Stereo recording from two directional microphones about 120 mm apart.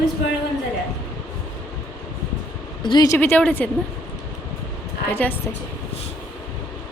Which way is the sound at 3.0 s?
15° left (ahead or behind).